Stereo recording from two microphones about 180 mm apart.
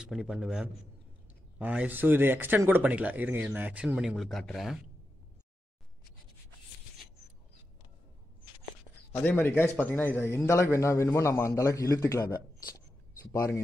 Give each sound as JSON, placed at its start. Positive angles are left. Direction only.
{"t": 0.0, "sound": "a man's voice", "side_deg": -5}
{"t": 9.2, "sound": "a man's voice", "side_deg": 10}
{"t": 13.3, "sound": "a man's voice", "side_deg": 15}